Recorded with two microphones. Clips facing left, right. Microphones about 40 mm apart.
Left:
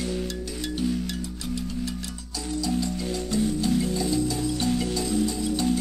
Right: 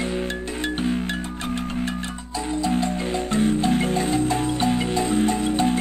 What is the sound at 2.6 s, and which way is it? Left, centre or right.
Music, right.